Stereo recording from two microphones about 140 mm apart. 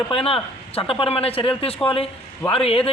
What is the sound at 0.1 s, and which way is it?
A man's voice, 40° left (ahead or behind).